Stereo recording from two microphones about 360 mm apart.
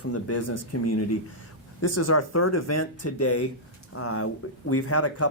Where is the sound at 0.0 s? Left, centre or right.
Left.